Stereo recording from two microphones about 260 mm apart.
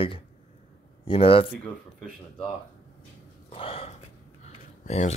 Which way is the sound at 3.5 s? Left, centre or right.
Left.